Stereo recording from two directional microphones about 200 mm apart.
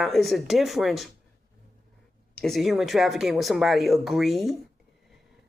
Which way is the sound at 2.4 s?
Centre (ahead or behind).